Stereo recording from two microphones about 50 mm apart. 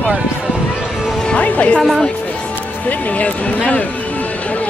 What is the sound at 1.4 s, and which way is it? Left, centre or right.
Speech, left.